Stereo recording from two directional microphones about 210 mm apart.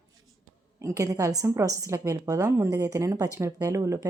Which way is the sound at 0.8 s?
15° right (ahead or behind).